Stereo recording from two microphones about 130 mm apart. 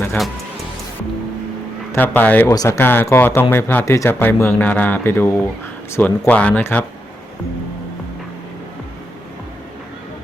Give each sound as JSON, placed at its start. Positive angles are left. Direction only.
{"t": 1.9, "sound": "speech", "side_deg": 15}